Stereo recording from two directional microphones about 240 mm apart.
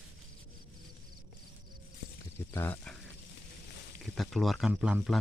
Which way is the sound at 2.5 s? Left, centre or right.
Centre.